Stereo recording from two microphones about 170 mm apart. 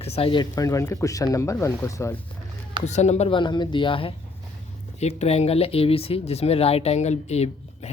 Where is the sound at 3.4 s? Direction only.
25° left (ahead or behind).